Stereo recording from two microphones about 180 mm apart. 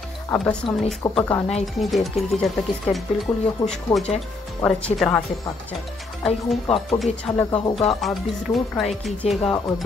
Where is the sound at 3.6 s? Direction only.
20° left (ahead or behind).